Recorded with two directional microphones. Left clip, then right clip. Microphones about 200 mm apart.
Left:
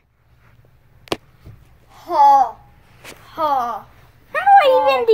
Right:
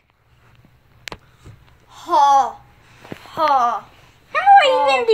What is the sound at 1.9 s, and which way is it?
Babbling, 55° right (ahead or behind).